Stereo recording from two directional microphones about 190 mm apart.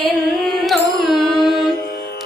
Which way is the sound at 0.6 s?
Centre (ahead or behind).